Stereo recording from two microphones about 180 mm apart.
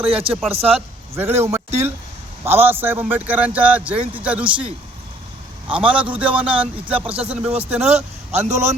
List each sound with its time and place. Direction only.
0.1 s speech: 30° right (ahead or behind)
1.1 s a man's voice: 15° right (ahead or behind)
7.9 s speech: 40° right (ahead or behind)